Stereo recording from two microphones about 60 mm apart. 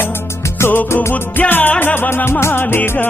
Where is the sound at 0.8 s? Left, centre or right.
Left.